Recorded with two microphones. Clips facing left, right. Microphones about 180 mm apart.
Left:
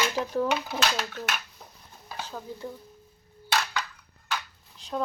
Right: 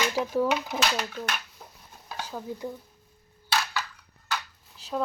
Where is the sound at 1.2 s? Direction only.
5° left (ahead or behind).